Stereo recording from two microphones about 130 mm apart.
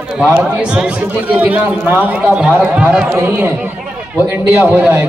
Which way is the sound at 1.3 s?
10° right (ahead or behind).